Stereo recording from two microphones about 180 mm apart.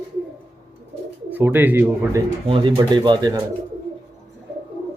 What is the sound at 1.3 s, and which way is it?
Speech, 10° right (ahead or behind).